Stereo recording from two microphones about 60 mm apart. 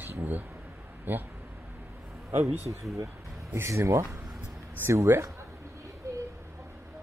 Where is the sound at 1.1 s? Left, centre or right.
Right.